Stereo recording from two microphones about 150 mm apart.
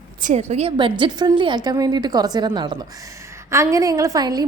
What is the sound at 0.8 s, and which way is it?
A woman's voice, 35° right (ahead or behind).